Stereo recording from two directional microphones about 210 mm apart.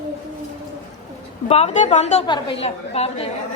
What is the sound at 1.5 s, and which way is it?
A woman's voice, 30° left (ahead or behind).